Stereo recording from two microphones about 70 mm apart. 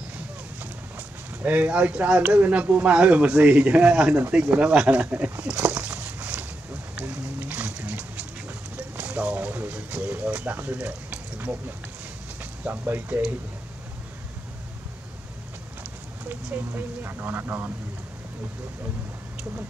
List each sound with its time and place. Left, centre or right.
0.6 s speech: right
5.4 s a sound: centre
8.7 s speech: right
12.6 s speech: right
15.8 s speech: right